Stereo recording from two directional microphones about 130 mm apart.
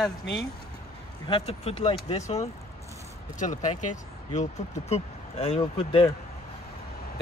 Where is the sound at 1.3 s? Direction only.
45° left (ahead or behind).